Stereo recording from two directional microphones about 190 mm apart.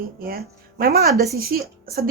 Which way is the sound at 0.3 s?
50° right (ahead or behind).